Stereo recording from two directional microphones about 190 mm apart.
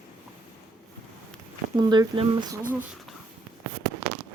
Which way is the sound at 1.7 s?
20° right (ahead or behind).